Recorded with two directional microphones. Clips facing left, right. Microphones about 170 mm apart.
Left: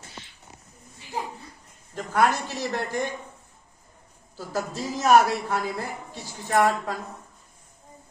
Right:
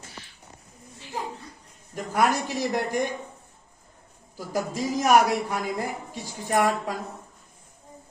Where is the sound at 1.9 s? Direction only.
10° right (ahead or behind).